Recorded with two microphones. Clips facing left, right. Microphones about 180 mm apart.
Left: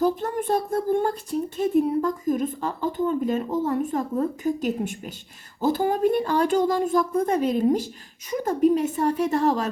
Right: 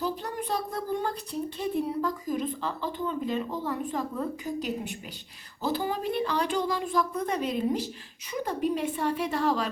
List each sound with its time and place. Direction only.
0.0 s speech: 50° left (ahead or behind)